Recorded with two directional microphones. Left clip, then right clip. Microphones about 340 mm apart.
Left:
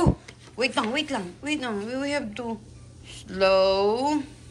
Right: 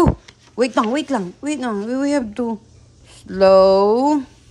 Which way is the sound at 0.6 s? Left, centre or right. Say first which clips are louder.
Right 7 dB; right.